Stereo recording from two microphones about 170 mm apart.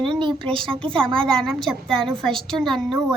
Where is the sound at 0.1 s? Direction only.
30° right (ahead or behind).